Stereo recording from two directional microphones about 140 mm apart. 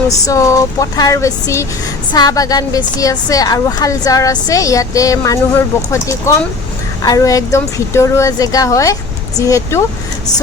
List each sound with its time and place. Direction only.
0.3 s a woman's voice: 20° left (ahead or behind)